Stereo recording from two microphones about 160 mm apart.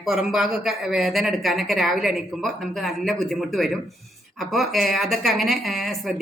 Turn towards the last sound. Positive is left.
turn(degrees=0)  # may be behind; listen again after turning